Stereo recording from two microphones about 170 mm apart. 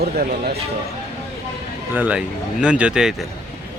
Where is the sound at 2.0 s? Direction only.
5° right (ahead or behind).